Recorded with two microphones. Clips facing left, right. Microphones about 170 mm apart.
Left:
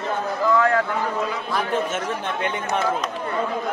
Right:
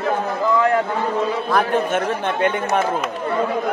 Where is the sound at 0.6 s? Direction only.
20° right (ahead or behind).